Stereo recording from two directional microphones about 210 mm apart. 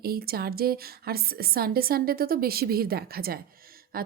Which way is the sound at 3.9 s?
45° right (ahead or behind).